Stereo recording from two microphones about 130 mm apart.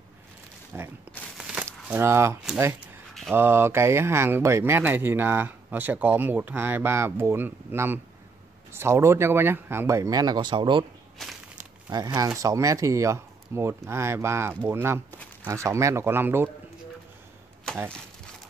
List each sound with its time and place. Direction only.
0.7 s speech: 20° right (ahead or behind)
1.4 s crumpling: 5° right (ahead or behind)
1.7 s speech: 20° right (ahead or behind)
3.3 s speech: 20° right (ahead or behind); by 10.9 s 40° right (ahead or behind)
11.2 s a sound: 5° left (ahead or behind)
11.9 s speech: 30° right (ahead or behind)